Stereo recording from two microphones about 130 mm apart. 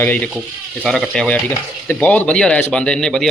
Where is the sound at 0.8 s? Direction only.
Centre (ahead or behind).